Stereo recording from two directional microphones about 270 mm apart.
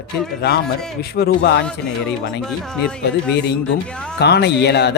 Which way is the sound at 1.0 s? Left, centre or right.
Left.